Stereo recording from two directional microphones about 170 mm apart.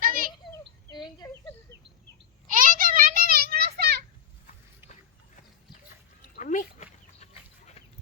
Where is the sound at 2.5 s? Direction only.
50° right (ahead or behind).